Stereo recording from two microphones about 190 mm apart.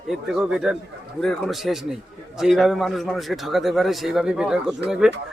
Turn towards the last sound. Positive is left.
turn(degrees=-5)  # may be behind; listen again after turning